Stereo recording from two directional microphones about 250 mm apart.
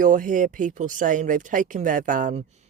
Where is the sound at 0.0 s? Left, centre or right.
Right.